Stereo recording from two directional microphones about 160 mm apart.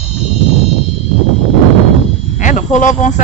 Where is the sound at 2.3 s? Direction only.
50° left (ahead or behind).